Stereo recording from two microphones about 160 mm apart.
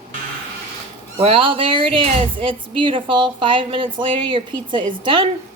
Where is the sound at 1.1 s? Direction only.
35° right (ahead or behind).